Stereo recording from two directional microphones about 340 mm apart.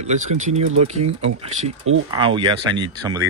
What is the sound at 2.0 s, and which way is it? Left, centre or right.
Speech, centre.